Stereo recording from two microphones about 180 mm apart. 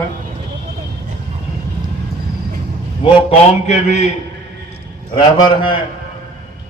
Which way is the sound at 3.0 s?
35° left (ahead or behind).